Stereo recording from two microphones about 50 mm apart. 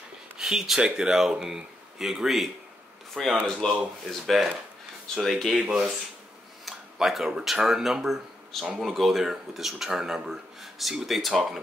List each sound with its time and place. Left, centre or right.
0.4 s speech: centre
3.6 s speech: centre
4.1 s speech: centre
5.6 s speech: centre